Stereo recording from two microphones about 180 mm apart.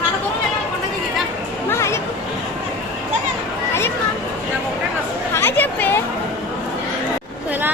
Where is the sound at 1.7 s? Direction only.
15° left (ahead or behind).